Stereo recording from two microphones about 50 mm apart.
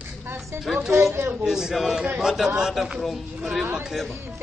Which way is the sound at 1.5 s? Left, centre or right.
Centre.